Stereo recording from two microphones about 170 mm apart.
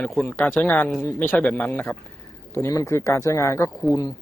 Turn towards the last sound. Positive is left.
turn(degrees=15)  # may be behind; listen again after turning